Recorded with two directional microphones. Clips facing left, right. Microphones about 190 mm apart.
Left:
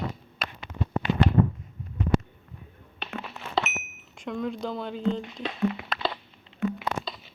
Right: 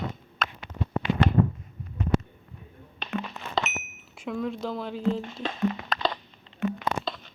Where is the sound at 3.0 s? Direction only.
5° left (ahead or behind).